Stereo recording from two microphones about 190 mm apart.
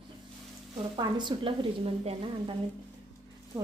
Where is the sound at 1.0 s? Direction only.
25° right (ahead or behind).